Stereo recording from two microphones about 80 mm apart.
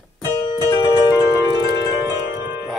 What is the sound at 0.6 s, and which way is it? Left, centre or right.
Music, left.